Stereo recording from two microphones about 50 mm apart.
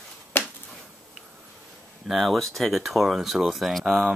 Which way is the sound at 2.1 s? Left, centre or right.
Centre.